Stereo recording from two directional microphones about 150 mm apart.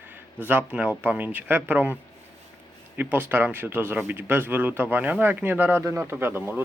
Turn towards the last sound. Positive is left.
turn(degrees=-15)  # may be behind; listen again after turning